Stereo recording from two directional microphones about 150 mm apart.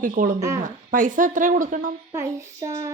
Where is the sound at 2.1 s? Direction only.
20° right (ahead or behind).